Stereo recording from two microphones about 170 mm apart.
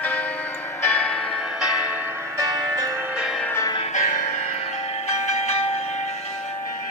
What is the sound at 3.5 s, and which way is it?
Music, 20° left (ahead or behind).